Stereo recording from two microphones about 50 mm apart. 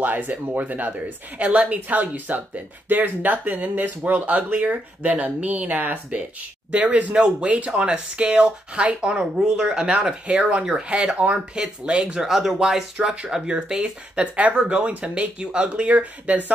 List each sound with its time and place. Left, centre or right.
0.0 s speech: right
12.2 s speech: centre
12.9 s speech: right